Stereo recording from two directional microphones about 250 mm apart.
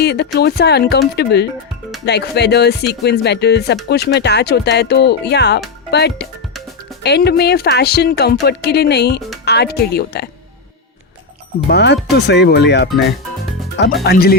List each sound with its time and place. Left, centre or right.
0.0 s speech: left
11.7 s speech: left
14.0 s speech: left